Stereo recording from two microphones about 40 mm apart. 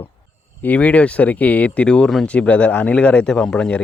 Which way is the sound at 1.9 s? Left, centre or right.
Left.